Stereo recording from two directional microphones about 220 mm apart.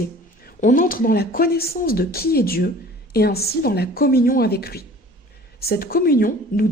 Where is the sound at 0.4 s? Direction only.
40° left (ahead or behind).